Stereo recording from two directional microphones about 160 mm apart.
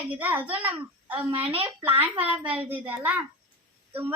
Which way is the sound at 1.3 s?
35° right (ahead or behind).